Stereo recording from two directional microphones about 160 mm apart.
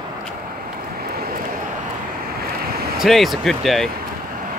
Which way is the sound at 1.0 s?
70° right (ahead or behind).